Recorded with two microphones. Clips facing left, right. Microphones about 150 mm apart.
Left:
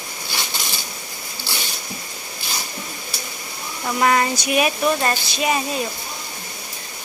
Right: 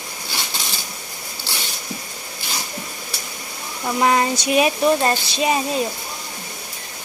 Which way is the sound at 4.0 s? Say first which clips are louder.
Right 1 dB; 20° right (ahead or behind).